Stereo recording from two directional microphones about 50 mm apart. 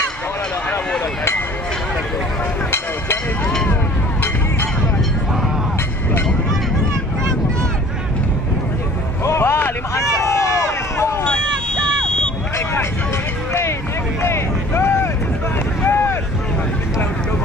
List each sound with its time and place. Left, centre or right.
9.4 s a sound: left
9.9 s run: left
11.2 s vehicle: centre
13.5 s a sound: left
14.2 s vehicle: left
15.8 s boat: left